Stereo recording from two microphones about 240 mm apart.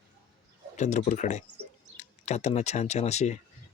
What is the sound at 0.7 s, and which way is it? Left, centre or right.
Speech, left.